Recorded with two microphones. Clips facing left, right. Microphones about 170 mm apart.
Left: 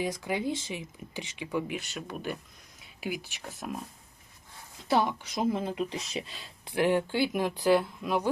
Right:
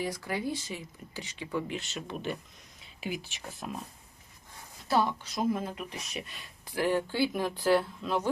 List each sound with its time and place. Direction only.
0.0 s speech: 20° left (ahead or behind)
4.9 s speech: 15° left (ahead or behind)